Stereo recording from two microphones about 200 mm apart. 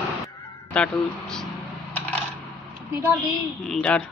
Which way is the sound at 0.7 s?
5° left (ahead or behind).